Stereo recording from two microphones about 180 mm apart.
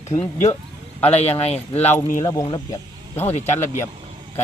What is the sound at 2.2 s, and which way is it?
Speech, 20° left (ahead or behind).